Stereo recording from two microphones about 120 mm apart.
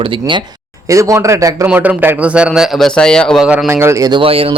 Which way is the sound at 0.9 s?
25° right (ahead or behind).